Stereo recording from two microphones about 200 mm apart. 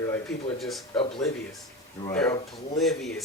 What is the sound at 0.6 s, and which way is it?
Speech, centre (ahead or behind).